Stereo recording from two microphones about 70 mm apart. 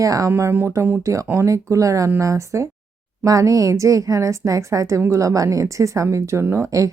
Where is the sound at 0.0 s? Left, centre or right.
Right.